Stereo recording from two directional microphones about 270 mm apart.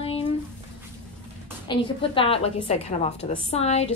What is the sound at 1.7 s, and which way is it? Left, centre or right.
A woman's voice, centre.